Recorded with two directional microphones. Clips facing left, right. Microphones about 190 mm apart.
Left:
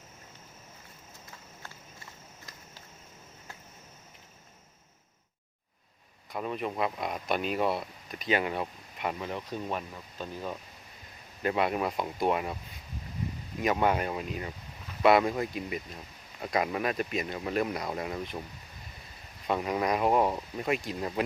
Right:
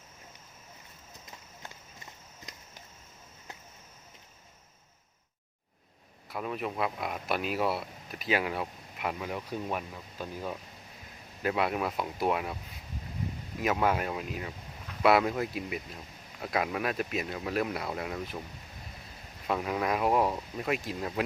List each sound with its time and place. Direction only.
2.5 s a sound: 20° right (ahead or behind)
6.3 s speech: centre (ahead or behind)
13.6 s speech: centre (ahead or behind)
19.5 s speech: centre (ahead or behind)